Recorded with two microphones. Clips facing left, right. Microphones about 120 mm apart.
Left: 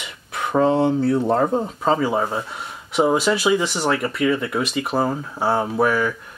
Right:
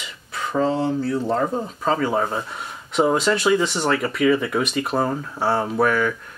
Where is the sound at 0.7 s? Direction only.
60° left (ahead or behind).